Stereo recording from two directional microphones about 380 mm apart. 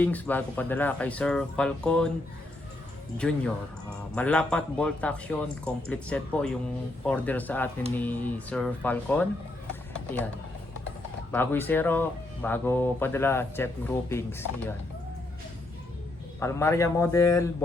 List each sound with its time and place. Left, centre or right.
0.0 s speech: centre
3.2 s speech: centre
11.3 s speech: centre
16.4 s a man's voice: centre